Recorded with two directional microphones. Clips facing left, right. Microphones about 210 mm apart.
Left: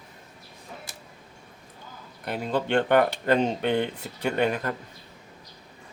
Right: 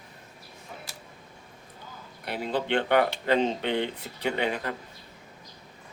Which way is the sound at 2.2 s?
45° left (ahead or behind).